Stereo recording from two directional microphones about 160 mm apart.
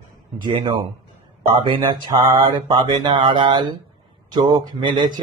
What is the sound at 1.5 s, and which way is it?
Speech, 30° right (ahead or behind).